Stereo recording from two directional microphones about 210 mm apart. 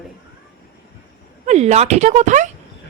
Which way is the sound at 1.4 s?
35° right (ahead or behind).